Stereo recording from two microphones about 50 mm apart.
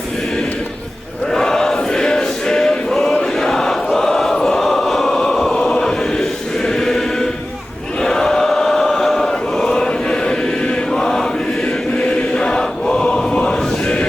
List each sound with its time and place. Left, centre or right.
1.3 s choir: centre
3.3 s a sound: centre
3.9 s choir: centre
5.7 s chant: centre
11.9 s choir: centre